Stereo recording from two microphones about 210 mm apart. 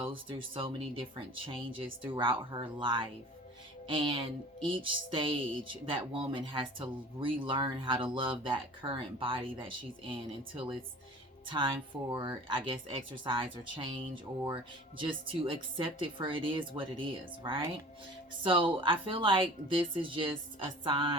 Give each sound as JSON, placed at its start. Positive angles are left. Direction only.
{"t": 0.0, "sound": "music", "side_deg": -25}